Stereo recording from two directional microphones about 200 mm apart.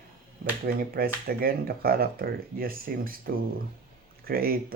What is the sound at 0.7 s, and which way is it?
Speech, 50° right (ahead or behind).